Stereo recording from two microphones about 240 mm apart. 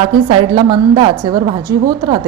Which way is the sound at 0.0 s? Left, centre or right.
Centre.